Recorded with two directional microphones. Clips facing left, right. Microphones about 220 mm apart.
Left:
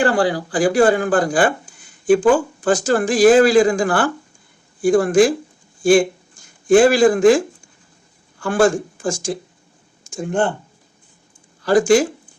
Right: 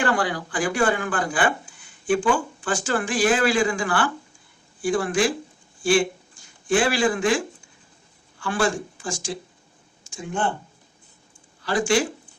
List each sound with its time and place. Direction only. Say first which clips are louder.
0.0 s speech: left 7 dB; 30° left (ahead or behind); by 10.5 s 50° left (ahead or behind)
11.6 s speech: left 8 dB; 45° left (ahead or behind)